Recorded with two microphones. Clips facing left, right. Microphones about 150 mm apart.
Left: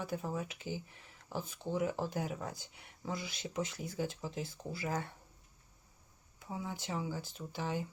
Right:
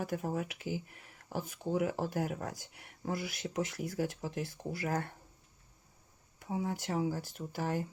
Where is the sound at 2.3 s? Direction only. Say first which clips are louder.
Right 2 dB; 65° right (ahead or behind).